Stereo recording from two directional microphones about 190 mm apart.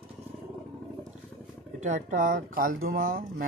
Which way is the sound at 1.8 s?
40° right (ahead or behind).